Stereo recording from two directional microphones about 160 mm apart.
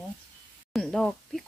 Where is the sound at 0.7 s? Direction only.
Centre (ahead or behind).